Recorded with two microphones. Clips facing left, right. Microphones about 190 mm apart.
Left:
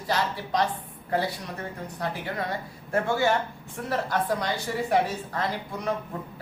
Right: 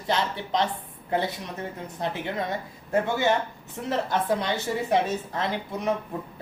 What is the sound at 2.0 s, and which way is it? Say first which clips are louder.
Speech: right 2 dB; 20° right (ahead or behind).